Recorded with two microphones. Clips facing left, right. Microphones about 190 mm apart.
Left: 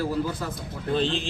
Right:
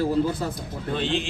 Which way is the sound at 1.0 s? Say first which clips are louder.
Even; 35° left (ahead or behind).